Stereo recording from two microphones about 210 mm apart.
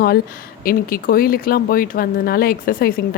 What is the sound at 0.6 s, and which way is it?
Speech, 45° left (ahead or behind).